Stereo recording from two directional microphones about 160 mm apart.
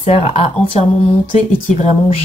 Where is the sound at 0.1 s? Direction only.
40° left (ahead or behind).